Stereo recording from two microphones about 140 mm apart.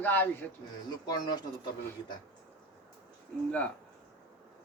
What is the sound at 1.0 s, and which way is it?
Speech, 30° left (ahead or behind).